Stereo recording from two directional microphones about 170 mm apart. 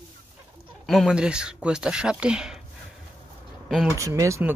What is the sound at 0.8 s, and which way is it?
Speech, centre (ahead or behind).